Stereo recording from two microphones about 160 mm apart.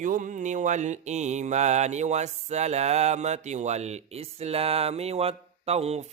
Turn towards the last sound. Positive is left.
turn(degrees=-40)  # may be behind; listen again after turning